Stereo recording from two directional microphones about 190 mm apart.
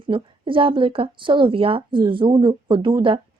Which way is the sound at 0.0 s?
25° right (ahead or behind).